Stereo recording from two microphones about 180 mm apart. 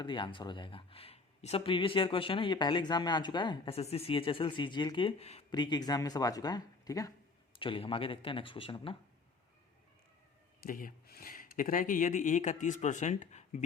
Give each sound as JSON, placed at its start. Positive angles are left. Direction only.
{"t": 0.0, "sound": "speech", "side_deg": 25}
{"t": 10.6, "sound": "speech", "side_deg": 50}